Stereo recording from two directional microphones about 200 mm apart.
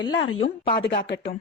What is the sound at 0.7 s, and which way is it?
Speech, 55° left (ahead or behind).